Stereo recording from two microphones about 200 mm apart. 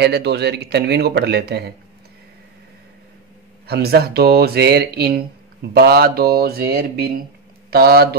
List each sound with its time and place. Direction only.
0.0 s a man's voice: 55° right (ahead or behind)
3.6 s speech: 50° right (ahead or behind)